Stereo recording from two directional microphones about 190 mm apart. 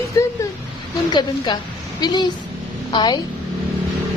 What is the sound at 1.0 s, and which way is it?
A woman's voice, 20° left (ahead or behind).